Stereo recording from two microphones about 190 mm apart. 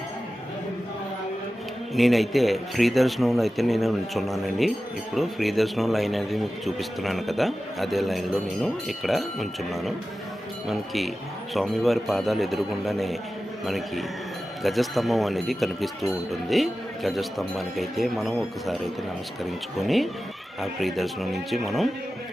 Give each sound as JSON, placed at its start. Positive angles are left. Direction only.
{"t": 2.0, "sound": "a man's voice", "side_deg": 0}
{"t": 19.8, "sound": "a man's voice", "side_deg": 0}